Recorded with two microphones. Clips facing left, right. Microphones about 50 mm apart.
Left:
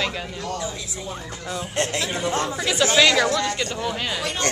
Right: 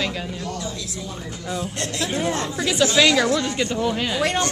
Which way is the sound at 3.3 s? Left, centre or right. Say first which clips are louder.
Right 1 dB; centre.